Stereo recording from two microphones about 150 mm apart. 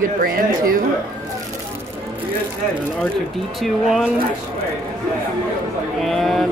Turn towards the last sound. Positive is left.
turn(degrees=0)  # may be behind; listen again after turning